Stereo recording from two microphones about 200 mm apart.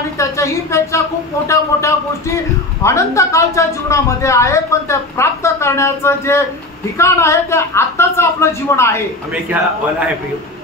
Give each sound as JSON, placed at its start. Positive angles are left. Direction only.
{"t": 0.2, "sound": "a woman's voice", "side_deg": 15}
{"t": 9.5, "sound": "a man's voice", "side_deg": -10}